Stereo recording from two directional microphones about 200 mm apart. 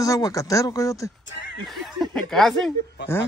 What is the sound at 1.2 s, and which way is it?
Neigh, 60° left (ahead or behind).